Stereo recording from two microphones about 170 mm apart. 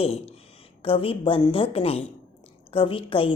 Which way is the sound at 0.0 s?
35° left (ahead or behind).